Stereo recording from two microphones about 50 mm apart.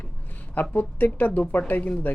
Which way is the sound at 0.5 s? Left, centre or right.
Left.